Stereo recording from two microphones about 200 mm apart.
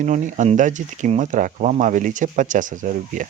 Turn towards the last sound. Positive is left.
turn(degrees=-40)  # may be behind; listen again after turning